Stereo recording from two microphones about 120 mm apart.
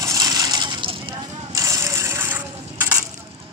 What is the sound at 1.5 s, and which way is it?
Coin, 30° right (ahead or behind).